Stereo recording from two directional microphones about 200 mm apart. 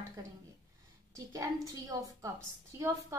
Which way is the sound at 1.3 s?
15° right (ahead or behind).